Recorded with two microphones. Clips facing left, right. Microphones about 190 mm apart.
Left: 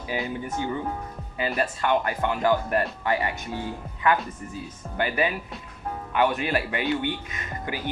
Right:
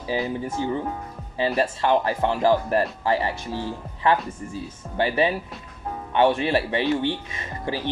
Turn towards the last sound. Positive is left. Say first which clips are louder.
# right 3 dB
turn(degrees=-30)  # may be behind; listen again after turning